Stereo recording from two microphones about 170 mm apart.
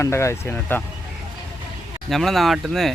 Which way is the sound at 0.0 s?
15° left (ahead or behind).